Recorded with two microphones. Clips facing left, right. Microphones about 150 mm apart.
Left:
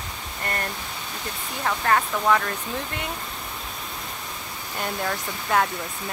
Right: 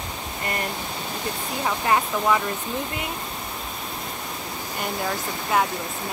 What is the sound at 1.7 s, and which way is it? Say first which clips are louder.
Speech: even; 15° right (ahead or behind).